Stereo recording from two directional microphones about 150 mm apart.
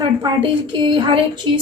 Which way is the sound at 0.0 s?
30° right (ahead or behind).